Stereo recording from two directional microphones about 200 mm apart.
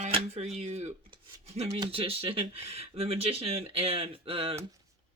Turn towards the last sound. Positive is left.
turn(degrees=-30)  # may be behind; listen again after turning